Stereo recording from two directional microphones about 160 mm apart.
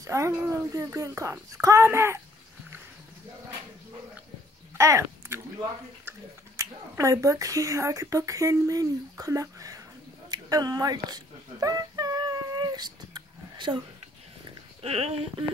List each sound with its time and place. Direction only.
0.0 s speech: 20° right (ahead or behind)
4.7 s speech: 20° right (ahead or behind)
10.3 s a sound: 25° right (ahead or behind)
14.8 s speech: 40° right (ahead or behind)